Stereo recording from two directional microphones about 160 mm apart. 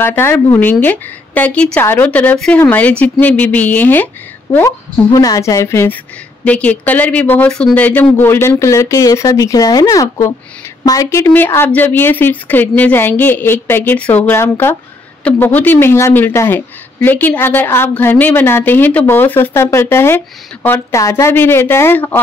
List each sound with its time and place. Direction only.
0.0 s a woman's voice: 15° left (ahead or behind)
4.6 s a woman's voice: 20° left (ahead or behind)